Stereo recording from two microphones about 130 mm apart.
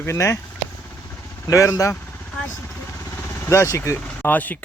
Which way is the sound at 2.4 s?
15° left (ahead or behind).